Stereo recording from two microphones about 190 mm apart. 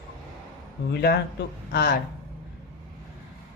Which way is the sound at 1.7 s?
55° left (ahead or behind).